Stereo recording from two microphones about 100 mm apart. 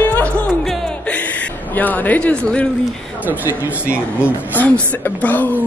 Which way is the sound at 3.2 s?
20° right (ahead or behind).